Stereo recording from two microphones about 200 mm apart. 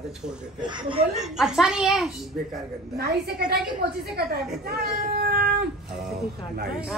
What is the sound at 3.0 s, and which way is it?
A woman's voice, 50° right (ahead or behind).